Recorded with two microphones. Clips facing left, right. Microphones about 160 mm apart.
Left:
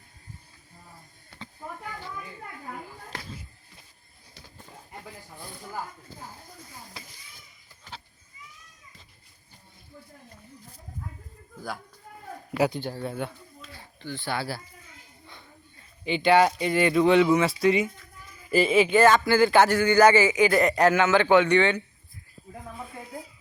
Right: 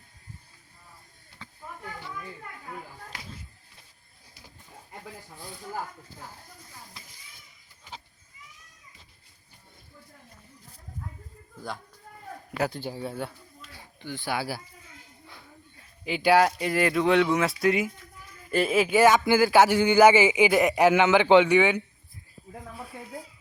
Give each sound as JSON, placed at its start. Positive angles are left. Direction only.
{"t": 12.6, "sound": "speech", "side_deg": 0}
{"t": 13.7, "sound": "a man's voice", "side_deg": -15}